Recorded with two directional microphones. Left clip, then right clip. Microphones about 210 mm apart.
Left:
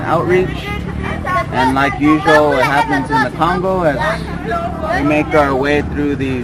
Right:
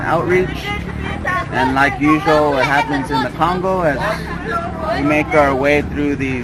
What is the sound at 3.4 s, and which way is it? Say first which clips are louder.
Speech: left 1 dB; centre (ahead or behind).